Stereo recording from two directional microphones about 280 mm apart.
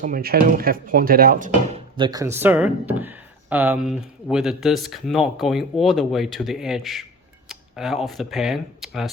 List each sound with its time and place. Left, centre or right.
0.0 s speech: right
1.6 s speech: centre